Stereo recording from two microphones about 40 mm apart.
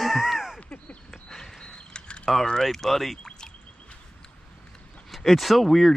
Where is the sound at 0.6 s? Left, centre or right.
Left.